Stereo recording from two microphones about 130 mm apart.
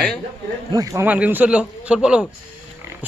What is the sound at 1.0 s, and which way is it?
A man's voice, 10° right (ahead or behind).